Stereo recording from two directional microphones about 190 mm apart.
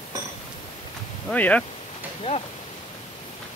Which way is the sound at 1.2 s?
5° left (ahead or behind).